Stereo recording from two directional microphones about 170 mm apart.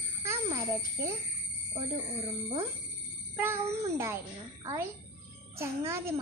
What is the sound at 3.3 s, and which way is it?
Speech, 15° right (ahead or behind).